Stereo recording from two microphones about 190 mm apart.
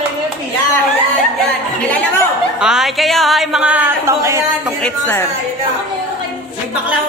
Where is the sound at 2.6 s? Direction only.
5° right (ahead or behind).